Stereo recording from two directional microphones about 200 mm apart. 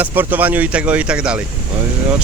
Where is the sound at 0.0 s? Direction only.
10° right (ahead or behind).